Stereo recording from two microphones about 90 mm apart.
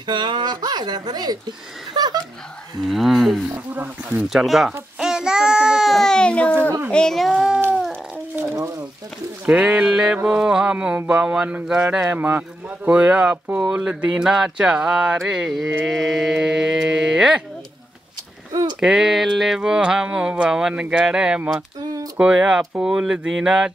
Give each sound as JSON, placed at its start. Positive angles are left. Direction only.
{"t": 0.0, "sound": "speech", "side_deg": -55}
{"t": 2.8, "sound": "mantra", "side_deg": 0}
{"t": 3.5, "sound": "speech", "side_deg": -15}
{"t": 4.3, "sound": "mantra", "side_deg": -5}
{"t": 4.9, "sound": "baby cry", "side_deg": -5}
{"t": 6.9, "sound": "mantra", "side_deg": 5}
{"t": 8.5, "sound": "a sound", "side_deg": -35}
{"t": 9.5, "sound": "speech", "side_deg": -10}
{"t": 15.8, "sound": "mantra", "side_deg": 0}
{"t": 18.5, "sound": "a sound", "side_deg": -40}
{"t": 18.8, "sound": "speech", "side_deg": -5}